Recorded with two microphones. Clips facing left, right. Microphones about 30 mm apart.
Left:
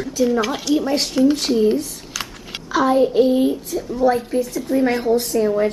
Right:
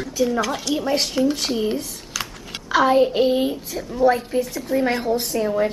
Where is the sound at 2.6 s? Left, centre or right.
Centre.